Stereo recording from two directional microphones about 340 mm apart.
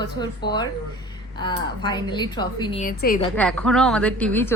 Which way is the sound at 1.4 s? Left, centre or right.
Centre.